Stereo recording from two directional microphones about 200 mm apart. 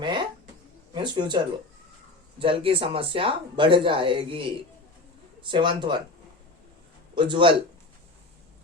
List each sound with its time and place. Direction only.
0.0 s a sound: 20° right (ahead or behind)
0.9 s speech: 20° right (ahead or behind)
2.4 s speech: 25° right (ahead or behind)
7.2 s speech: 25° right (ahead or behind)